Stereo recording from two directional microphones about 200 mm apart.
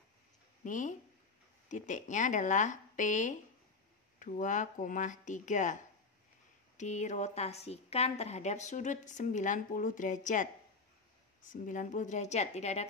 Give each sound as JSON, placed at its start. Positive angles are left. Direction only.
{"t": 0.7, "sound": "a woman's voice", "side_deg": 40}
{"t": 6.8, "sound": "a woman's voice", "side_deg": 35}
{"t": 11.5, "sound": "a woman's voice", "side_deg": 40}